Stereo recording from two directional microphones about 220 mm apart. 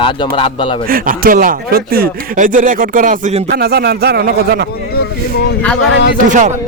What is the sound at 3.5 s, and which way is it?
Speech, 45° right (ahead or behind).